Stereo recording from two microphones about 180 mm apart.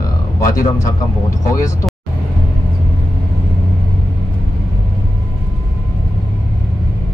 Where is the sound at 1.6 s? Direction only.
15° left (ahead or behind).